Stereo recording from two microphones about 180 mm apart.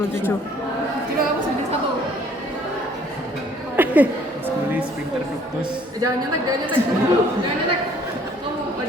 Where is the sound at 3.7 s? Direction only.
10° right (ahead or behind).